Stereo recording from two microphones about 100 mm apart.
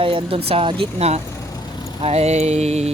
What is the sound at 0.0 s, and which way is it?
Speech, 65° right (ahead or behind).